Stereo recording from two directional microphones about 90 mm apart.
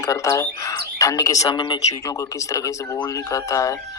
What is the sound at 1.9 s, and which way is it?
Speech, 40° left (ahead or behind).